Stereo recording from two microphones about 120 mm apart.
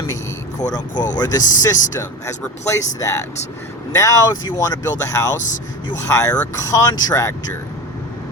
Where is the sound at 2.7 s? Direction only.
25° left (ahead or behind).